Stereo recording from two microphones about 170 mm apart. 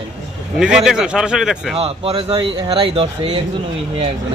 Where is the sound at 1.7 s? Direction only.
35° right (ahead or behind).